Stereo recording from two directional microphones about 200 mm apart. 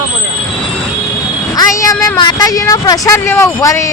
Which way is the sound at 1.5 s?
15° left (ahead or behind).